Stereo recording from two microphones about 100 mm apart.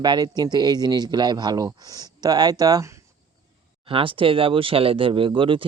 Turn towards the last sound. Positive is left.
turn(degrees=-60)  # may be behind; listen again after turning